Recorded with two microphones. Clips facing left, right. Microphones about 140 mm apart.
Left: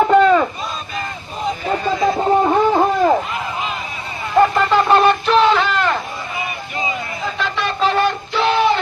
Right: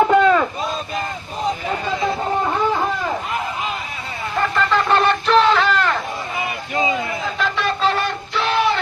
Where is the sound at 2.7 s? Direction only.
45° left (ahead or behind).